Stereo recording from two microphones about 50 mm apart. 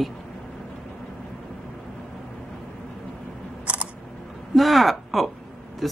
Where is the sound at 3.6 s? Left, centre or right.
Right.